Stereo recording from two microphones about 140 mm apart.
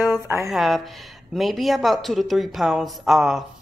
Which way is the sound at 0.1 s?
20° right (ahead or behind).